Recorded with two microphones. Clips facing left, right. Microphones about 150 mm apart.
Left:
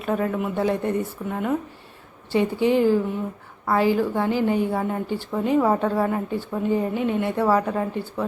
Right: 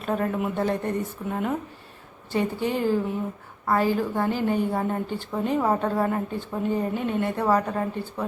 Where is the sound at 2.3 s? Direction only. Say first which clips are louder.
Left 5 dB; 20° left (ahead or behind).